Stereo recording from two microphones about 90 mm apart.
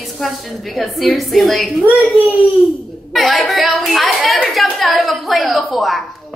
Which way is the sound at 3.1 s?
Centre (ahead or behind).